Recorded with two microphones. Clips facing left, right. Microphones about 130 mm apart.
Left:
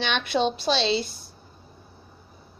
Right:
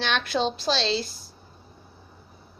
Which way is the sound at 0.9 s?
55° left (ahead or behind).